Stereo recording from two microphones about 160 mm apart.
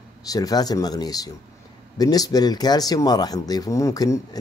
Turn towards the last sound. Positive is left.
turn(degrees=20)  # may be behind; listen again after turning